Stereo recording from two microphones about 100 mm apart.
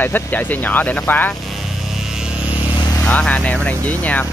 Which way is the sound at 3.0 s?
10° left (ahead or behind).